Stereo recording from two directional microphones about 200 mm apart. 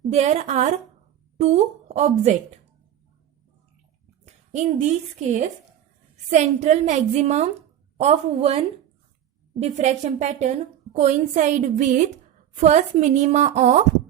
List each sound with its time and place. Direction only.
0.1 s a woman's voice: 35° right (ahead or behind)
4.5 s a woman's voice: 35° right (ahead or behind)